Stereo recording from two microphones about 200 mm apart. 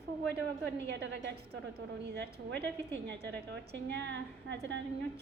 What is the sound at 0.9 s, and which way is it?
Speech, 55° right (ahead or behind).